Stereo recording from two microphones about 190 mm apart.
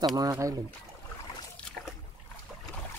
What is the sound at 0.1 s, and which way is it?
Speech, 20° right (ahead or behind).